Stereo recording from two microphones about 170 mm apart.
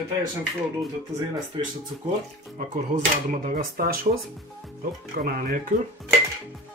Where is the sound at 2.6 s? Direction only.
60° right (ahead or behind).